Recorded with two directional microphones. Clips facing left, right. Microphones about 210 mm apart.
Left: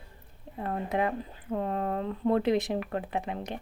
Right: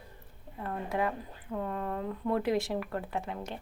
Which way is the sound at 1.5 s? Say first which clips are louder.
Left 4 dB; 35° left (ahead or behind).